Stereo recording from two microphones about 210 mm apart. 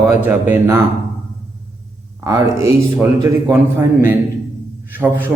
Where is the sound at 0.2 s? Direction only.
10° right (ahead or behind).